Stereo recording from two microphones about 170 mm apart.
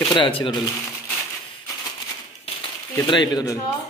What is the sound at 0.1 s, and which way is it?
Speech, 30° left (ahead or behind).